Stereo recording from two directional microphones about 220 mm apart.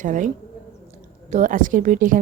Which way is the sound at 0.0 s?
35° right (ahead or behind).